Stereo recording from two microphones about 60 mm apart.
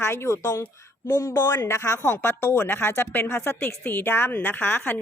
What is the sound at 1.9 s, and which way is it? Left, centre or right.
A woman's voice, left.